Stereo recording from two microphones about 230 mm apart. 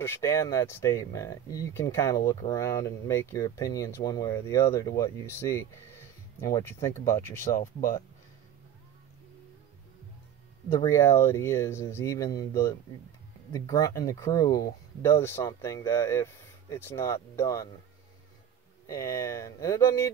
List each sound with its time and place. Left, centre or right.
0.0 s speech: centre
7.5 s speech: left
10.8 s speech: centre
18.9 s speech: centre